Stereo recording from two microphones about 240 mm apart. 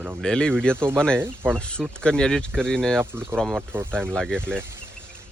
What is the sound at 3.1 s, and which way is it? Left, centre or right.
Speech, centre.